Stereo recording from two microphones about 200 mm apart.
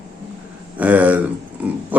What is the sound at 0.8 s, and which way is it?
Speech, 5° right (ahead or behind).